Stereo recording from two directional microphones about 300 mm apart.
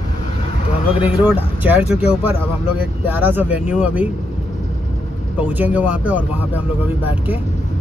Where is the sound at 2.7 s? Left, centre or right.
Centre.